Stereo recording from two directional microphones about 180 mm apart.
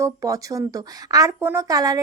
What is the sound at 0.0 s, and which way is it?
Speech, 20° right (ahead or behind).